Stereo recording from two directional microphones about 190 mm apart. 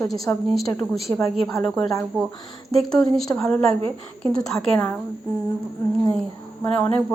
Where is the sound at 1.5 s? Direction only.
10° left (ahead or behind).